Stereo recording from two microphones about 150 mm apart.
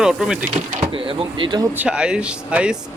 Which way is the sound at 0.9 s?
35° right (ahead or behind).